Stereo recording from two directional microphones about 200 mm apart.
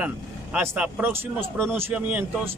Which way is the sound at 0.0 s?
5° right (ahead or behind).